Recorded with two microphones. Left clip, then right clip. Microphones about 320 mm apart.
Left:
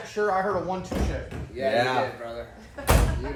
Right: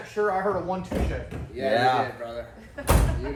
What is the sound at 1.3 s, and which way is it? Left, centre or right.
Speech, centre.